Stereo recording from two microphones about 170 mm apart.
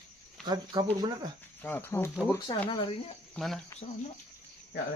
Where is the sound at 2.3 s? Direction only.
25° left (ahead or behind).